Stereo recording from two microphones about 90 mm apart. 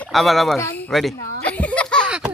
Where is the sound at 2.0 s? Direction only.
10° right (ahead or behind).